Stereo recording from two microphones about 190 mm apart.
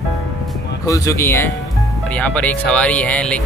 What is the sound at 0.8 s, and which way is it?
Speech, 15° left (ahead or behind).